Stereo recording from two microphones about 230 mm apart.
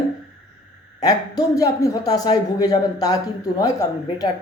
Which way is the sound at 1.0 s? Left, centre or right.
Centre.